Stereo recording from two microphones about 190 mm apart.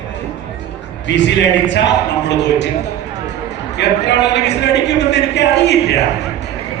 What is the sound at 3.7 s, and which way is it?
A man's voice, 65° left (ahead or behind).